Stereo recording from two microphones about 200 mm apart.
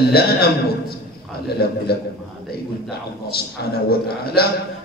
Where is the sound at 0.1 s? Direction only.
50° left (ahead or behind).